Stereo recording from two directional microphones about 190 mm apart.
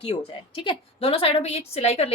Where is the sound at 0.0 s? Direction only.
30° left (ahead or behind).